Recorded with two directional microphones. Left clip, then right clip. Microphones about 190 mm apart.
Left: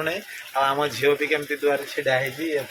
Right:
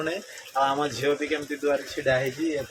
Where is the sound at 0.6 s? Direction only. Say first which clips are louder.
Left 3 dB; 15° left (ahead or behind).